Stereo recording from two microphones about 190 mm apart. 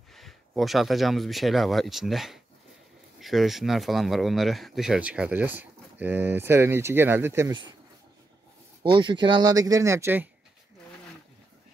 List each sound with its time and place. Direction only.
0.1 s speech: centre (ahead or behind)
8.8 s speech: 25° right (ahead or behind)